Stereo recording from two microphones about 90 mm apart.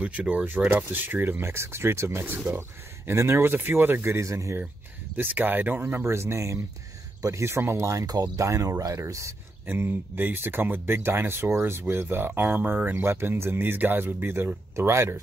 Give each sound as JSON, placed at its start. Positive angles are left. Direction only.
{"t": 0.0, "sound": "speech", "side_deg": -15}
{"t": 5.1, "sound": "speech", "side_deg": -20}
{"t": 9.7, "sound": "speech", "side_deg": -25}